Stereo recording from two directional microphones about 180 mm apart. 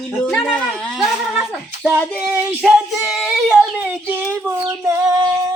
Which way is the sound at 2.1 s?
10° right (ahead or behind).